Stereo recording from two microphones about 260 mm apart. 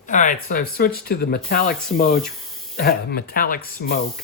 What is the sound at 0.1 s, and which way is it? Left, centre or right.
Speech, left.